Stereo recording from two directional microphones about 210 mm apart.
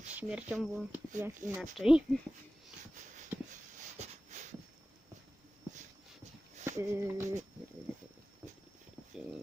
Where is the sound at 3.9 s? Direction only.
35° right (ahead or behind).